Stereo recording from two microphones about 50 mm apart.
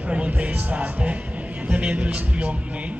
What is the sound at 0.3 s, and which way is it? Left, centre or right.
A man's voice, right.